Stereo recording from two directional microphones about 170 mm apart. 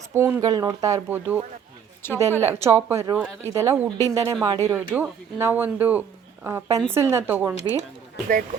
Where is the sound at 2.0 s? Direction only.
15° left (ahead or behind).